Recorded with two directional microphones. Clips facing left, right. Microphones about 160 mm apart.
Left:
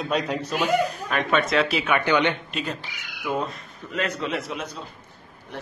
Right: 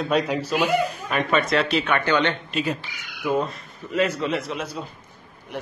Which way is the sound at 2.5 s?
5° right (ahead or behind).